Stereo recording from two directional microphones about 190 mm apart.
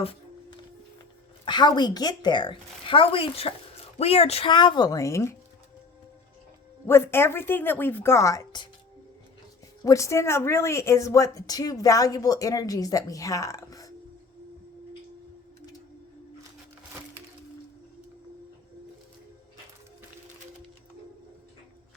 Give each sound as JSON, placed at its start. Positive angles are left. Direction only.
{"t": 0.0, "sound": "music", "side_deg": 30}
{"t": 1.5, "sound": "a woman's voice", "side_deg": 25}
{"t": 6.8, "sound": "speech", "side_deg": 15}
{"t": 9.8, "sound": "speech", "side_deg": 15}